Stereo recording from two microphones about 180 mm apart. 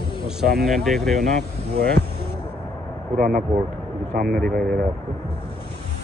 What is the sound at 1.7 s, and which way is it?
Speech, 65° right (ahead or behind).